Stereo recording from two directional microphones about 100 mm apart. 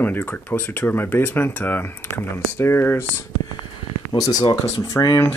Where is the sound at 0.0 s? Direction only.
20° left (ahead or behind).